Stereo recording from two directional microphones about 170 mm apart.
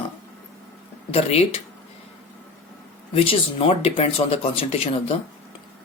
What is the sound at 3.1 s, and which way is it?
Speech, 35° left (ahead or behind).